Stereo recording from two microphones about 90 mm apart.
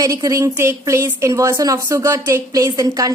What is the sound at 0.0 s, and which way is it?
A woman's voice, 40° right (ahead or behind).